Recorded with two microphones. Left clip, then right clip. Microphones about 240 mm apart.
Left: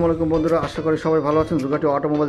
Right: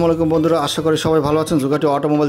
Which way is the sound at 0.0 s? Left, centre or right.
Right.